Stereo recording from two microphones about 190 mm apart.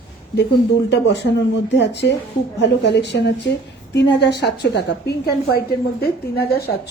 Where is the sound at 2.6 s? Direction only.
65° left (ahead or behind).